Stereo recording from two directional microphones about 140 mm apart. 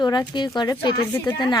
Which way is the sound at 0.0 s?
25° left (ahead or behind).